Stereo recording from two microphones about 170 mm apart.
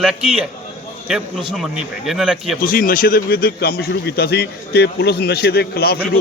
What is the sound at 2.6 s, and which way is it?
A man's voice, 60° left (ahead or behind).